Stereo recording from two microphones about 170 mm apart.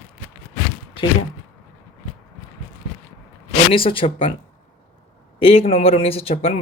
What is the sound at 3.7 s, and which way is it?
Speech, 30° left (ahead or behind).